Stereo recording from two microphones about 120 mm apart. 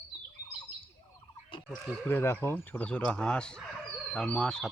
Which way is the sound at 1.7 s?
15° left (ahead or behind).